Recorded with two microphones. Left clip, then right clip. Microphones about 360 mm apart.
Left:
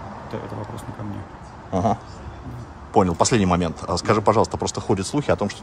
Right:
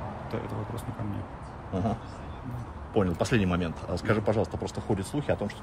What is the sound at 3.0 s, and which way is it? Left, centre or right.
Speech, centre.